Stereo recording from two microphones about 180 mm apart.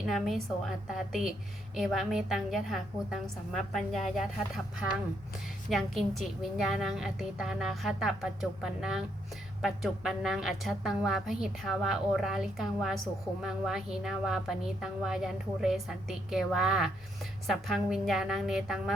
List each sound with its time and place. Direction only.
0.1 s a woman's voice: centre (ahead or behind)